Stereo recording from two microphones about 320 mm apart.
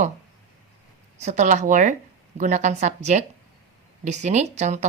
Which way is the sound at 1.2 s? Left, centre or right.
Right.